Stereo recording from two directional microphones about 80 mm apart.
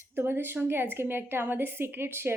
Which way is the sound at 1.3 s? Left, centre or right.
Right.